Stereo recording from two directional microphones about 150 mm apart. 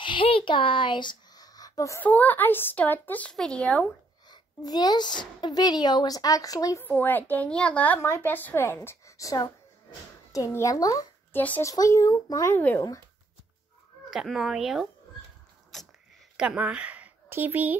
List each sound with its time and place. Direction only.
0.0 s speech: 35° left (ahead or behind); by 3.8 s 5° left (ahead or behind)
4.3 s a child's voice: 25° left (ahead or behind)
6.9 s a child's voice: 10° left (ahead or behind)
11.4 s speech: 10° left (ahead or behind)
11.7 s speech: 25° left (ahead or behind)
14.1 s speech: centre (ahead or behind)
15.7 s a sound: 5° left (ahead or behind)
16.3 s a woman's voice: 10° right (ahead or behind)